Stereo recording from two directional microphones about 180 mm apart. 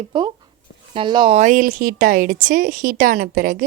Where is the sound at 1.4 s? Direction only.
45° right (ahead or behind).